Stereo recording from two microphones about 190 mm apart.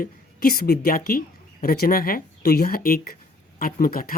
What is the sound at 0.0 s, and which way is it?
Speech, 55° left (ahead or behind).